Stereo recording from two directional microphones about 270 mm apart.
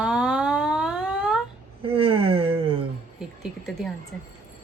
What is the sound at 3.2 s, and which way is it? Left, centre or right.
Speech, centre.